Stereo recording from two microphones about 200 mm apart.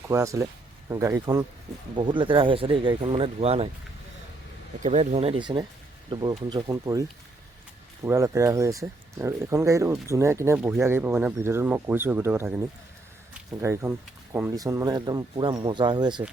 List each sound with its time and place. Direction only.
0.1 s speech: 15° right (ahead or behind); by 3.7 s 30° right (ahead or behind)
4.8 s speech: 35° right (ahead or behind); by 7.0 s 15° right (ahead or behind)
8.0 s speech: 15° right (ahead or behind)
13.6 s speech: 15° right (ahead or behind)